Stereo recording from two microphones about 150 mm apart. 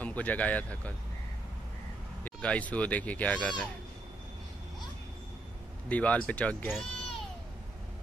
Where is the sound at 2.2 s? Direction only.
10° left (ahead or behind).